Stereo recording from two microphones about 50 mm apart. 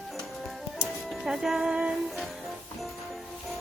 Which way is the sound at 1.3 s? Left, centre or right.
Centre.